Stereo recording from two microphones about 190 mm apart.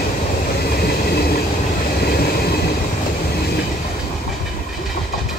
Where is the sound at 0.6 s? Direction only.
55° left (ahead or behind).